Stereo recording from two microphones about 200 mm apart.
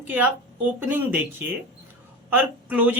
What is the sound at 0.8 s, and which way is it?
Speech, 10° right (ahead or behind).